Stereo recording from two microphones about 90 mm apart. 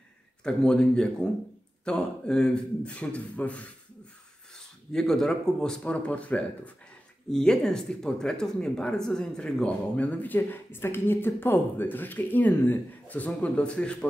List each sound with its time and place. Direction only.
0.4 s speech: 10° left (ahead or behind)
4.9 s speech: 5° left (ahead or behind)